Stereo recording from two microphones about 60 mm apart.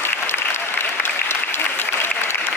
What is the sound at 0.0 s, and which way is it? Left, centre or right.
Applause, left.